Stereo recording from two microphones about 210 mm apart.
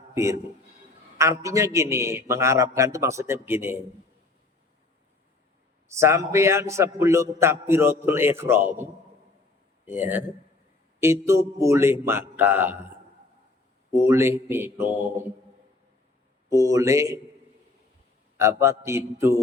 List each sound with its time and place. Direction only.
0.1 s a man's voice: 15° right (ahead or behind)
5.9 s a man's voice: 15° right (ahead or behind)
13.9 s a man's voice: 10° right (ahead or behind)
16.5 s a man's voice: 15° right (ahead or behind)
18.3 s a man's voice: 15° right (ahead or behind)